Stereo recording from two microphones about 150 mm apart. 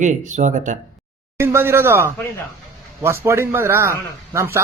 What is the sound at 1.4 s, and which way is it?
A man's voice, 15° right (ahead or behind).